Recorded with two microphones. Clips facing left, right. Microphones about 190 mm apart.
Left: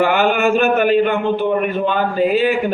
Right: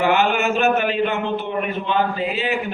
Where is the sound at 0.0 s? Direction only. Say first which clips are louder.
Left 3 dB; 50° left (ahead or behind).